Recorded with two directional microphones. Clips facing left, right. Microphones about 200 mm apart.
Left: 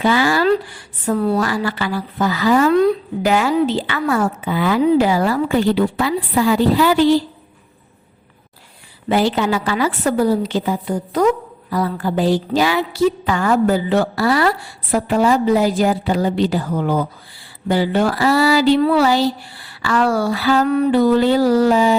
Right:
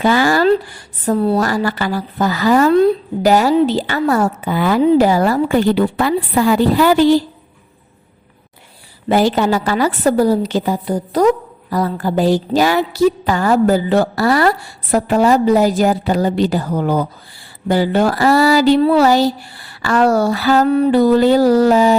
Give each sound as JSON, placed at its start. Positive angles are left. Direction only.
{"t": 0.0, "sound": "a sound", "side_deg": -45}
{"t": 0.4, "sound": "speech", "side_deg": -35}
{"t": 1.4, "sound": "a woman's voice", "side_deg": -40}
{"t": 9.0, "sound": "a woman's voice", "side_deg": -40}
{"t": 20.7, "sound": "a woman's voice", "side_deg": -30}